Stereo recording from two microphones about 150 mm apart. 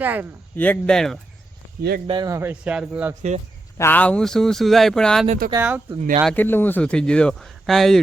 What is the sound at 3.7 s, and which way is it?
A man's voice, 15° left (ahead or behind).